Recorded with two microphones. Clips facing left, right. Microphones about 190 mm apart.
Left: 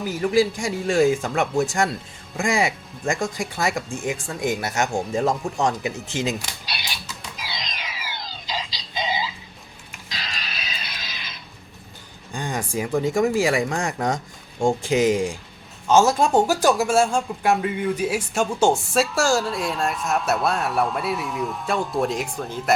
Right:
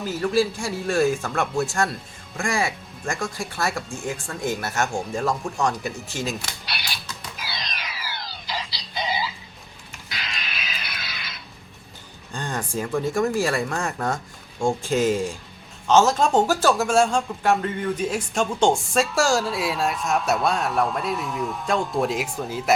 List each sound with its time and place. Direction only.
0.0 s speech: 15° left (ahead or behind)
7.4 s a sound: 15° left (ahead or behind)
10.2 s music: 35° left (ahead or behind)
12.3 s speech: 10° left (ahead or behind)